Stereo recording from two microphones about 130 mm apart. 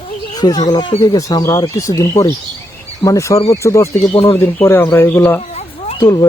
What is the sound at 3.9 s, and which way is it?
Speech, 50° left (ahead or behind).